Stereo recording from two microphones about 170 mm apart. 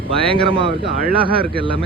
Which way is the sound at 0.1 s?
35° right (ahead or behind).